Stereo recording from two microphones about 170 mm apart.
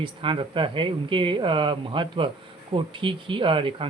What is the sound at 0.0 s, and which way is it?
Speech, 30° right (ahead or behind).